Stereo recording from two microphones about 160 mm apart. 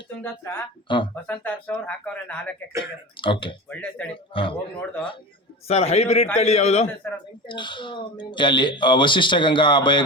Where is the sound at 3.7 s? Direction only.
5° left (ahead or behind).